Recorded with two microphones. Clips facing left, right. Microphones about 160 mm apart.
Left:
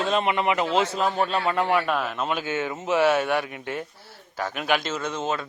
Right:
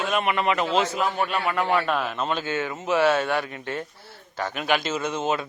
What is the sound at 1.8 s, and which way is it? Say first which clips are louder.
A man's voice: even; centre (ahead or behind).